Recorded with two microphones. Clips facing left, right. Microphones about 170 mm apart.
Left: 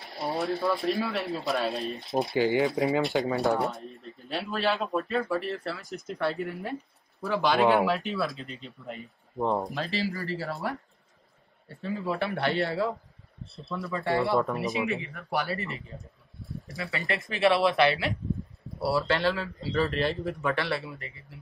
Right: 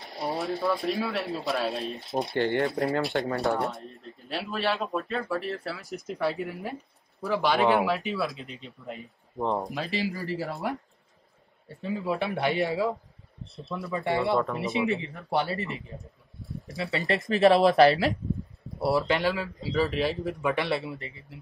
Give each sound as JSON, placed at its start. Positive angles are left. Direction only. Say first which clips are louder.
{"t": 0.2, "sound": "speech", "louder": "even", "side_deg": 0}
{"t": 9.8, "sound": "speech", "louder": "right 1 dB", "side_deg": -15}
{"t": 11.8, "sound": "speech", "louder": "right 1 dB", "side_deg": -15}
{"t": 14.7, "sound": "speech", "louder": "right 2 dB", "side_deg": -30}
{"t": 17.0, "sound": "speech", "louder": "right 4 dB", "side_deg": -40}
{"t": 18.8, "sound": "speech", "louder": "right 1 dB", "side_deg": -15}